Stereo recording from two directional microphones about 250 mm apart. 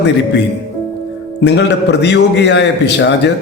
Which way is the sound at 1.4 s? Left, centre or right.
Left.